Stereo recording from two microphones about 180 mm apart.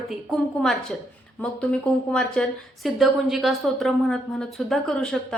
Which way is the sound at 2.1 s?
5° left (ahead or behind).